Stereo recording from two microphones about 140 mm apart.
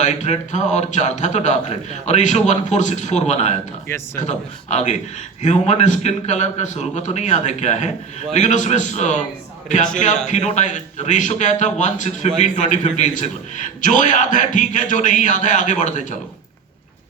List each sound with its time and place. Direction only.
0.0 s a man's voice: 55° left (ahead or behind)
3.8 s speech: 20° left (ahead or behind)
4.2 s a man's voice: 55° left (ahead or behind)